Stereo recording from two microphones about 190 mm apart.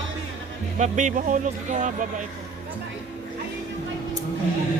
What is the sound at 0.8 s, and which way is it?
Speech, 40° right (ahead or behind).